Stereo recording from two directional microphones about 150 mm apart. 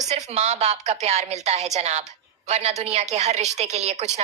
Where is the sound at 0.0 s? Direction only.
50° right (ahead or behind).